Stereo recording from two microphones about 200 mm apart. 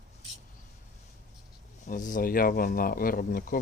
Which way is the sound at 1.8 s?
40° left (ahead or behind).